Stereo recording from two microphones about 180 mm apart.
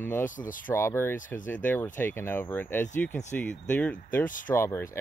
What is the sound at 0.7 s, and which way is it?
Speech, 15° left (ahead or behind).